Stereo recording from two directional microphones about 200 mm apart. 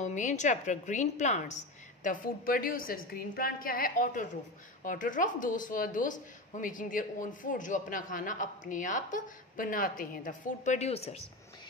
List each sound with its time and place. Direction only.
0.0 s speech: 35° left (ahead or behind)